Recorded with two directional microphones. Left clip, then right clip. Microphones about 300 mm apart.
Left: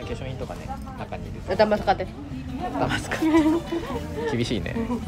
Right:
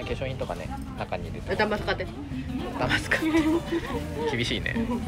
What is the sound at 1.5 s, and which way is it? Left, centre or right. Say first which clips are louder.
Speech: left 6 dB; left.